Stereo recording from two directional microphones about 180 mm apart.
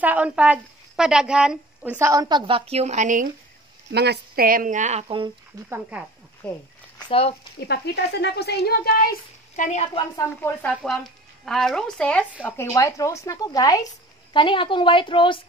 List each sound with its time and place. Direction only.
0.0 s a woman's voice: 10° right (ahead or behind)
2.0 s a woman's voice: 15° right (ahead or behind); by 3.3 s 45° right (ahead or behind)
3.9 s speech: 65° right (ahead or behind); by 5.3 s 30° right (ahead or behind)
5.7 s speech: 10° right (ahead or behind)
6.4 s speech: 5° left (ahead or behind)
7.0 s speech: 30° left (ahead or behind)
7.6 s speech: 65° left (ahead or behind)
9.6 s a woman's voice: 40° left (ahead or behind)
10.3 s a woman's voice: 5° left (ahead or behind); by 15.4 s 30° left (ahead or behind)